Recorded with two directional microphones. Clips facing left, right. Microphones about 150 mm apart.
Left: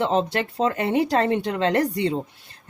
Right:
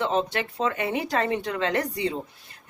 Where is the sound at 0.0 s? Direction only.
30° left (ahead or behind).